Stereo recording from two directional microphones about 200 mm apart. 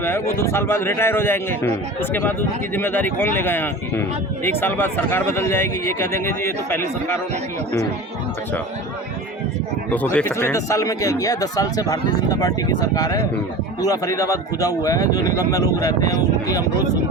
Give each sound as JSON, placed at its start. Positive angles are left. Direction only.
{"t": 0.0, "sound": "speech", "side_deg": 10}
{"t": 9.9, "sound": "speech", "side_deg": 5}